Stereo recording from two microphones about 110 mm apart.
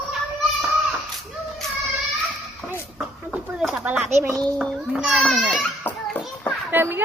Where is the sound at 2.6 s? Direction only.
Centre (ahead or behind).